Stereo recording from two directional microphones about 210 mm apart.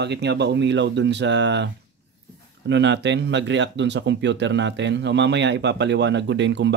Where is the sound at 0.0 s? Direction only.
55° right (ahead or behind).